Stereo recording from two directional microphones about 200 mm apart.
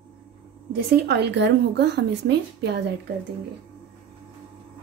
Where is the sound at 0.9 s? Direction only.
55° right (ahead or behind).